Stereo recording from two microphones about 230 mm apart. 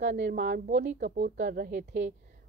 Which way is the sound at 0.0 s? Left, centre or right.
Right.